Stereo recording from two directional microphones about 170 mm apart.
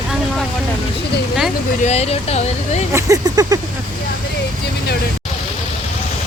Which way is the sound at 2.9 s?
15° right (ahead or behind).